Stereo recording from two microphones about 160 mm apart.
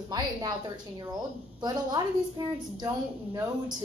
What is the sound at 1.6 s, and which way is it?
A woman's voice, 25° right (ahead or behind).